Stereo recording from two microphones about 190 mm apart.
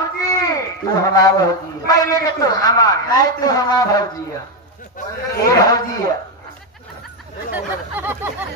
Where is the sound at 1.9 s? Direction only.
20° left (ahead or behind).